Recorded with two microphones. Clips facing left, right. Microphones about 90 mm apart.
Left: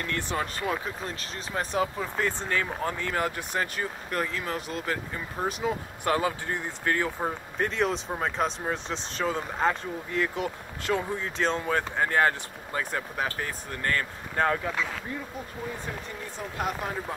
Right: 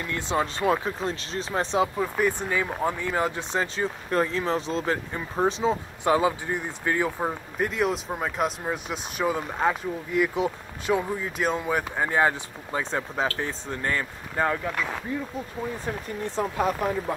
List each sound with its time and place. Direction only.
0.0 s speech: 20° right (ahead or behind)
2.0 s speech: 15° right (ahead or behind)
14.3 s speech: centre (ahead or behind)
16.4 s speech: 90° right